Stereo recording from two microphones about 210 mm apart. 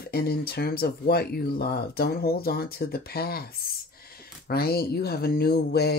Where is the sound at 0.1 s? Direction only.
45° left (ahead or behind).